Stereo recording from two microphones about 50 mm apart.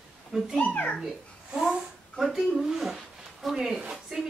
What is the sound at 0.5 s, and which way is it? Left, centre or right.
Speech, left.